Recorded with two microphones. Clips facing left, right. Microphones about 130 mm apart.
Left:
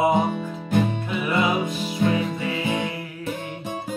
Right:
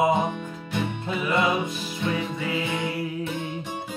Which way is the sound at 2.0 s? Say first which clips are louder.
Left 6 dB; 45° left (ahead or behind).